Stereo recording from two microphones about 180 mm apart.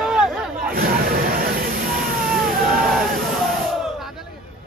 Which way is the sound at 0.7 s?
55° right (ahead or behind).